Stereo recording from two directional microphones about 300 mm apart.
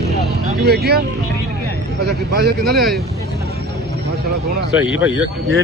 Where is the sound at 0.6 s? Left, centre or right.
Right.